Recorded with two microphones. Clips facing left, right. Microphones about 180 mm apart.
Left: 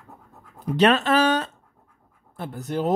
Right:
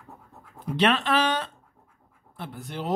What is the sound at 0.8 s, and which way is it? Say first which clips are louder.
Speech: left 4 dB; 40° left (ahead or behind).